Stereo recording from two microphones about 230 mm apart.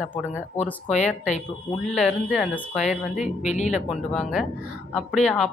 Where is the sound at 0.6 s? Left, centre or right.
Left.